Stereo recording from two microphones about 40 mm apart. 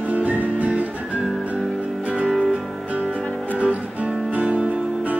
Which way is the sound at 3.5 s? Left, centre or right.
Right.